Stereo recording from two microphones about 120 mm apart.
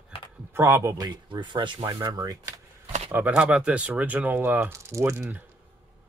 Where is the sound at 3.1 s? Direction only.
15° right (ahead or behind).